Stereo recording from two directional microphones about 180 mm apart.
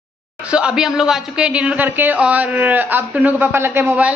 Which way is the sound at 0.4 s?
5° right (ahead or behind).